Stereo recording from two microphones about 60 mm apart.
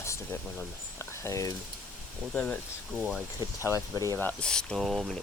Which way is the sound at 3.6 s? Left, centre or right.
Left.